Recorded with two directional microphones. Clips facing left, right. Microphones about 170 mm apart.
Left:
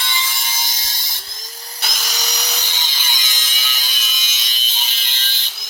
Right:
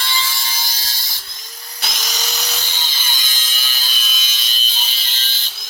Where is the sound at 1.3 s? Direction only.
40° left (ahead or behind).